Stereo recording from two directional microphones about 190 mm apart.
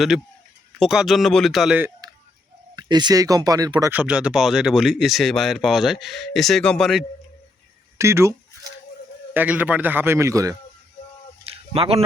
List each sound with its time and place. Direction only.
0.8 s speech: centre (ahead or behind)
2.7 s speech: 20° right (ahead or behind)
3.9 s speech: 5° right (ahead or behind)
7.9 s a man's voice: 15° right (ahead or behind)
11.4 s a sound: 30° right (ahead or behind)